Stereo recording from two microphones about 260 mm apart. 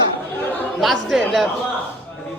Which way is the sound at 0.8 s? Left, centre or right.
Centre.